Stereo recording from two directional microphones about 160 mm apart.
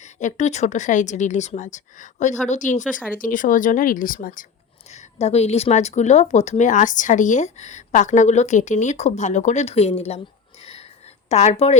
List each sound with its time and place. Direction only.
0.0 s speech: 50° left (ahead or behind)
5.2 s speech: 40° left (ahead or behind)
10.6 s a sound: 40° left (ahead or behind)
11.3 s speech: 45° left (ahead or behind)